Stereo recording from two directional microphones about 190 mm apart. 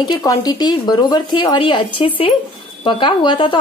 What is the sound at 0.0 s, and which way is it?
Speech, 20° left (ahead or behind).